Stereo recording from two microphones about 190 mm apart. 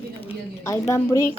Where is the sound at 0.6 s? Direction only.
15° left (ahead or behind).